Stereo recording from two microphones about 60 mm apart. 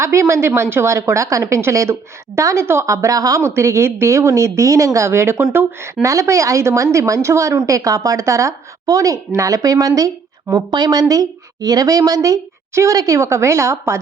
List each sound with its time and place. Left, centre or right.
0.0 s a woman's voice: right
3.4 s a woman's voice: right
6.0 s a woman's voice: right
11.1 s a woman's voice: right